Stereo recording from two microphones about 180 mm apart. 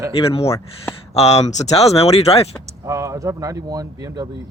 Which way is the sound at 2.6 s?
15° right (ahead or behind).